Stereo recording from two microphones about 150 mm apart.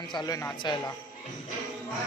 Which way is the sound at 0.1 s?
25° left (ahead or behind).